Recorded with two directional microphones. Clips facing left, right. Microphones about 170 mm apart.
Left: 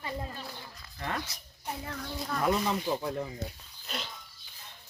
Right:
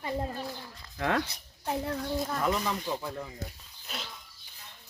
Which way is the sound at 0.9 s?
90° right.